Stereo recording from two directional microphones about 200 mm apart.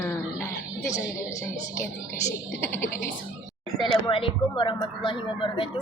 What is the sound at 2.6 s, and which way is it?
Speech, 10° left (ahead or behind).